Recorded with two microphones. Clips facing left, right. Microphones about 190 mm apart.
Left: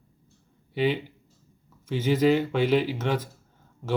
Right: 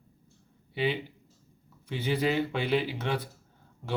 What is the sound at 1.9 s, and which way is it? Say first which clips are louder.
Speech: left 7 dB; 45° left (ahead or behind).